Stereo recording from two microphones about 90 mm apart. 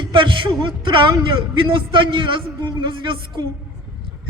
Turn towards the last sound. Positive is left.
turn(degrees=-65)  # may be behind; listen again after turning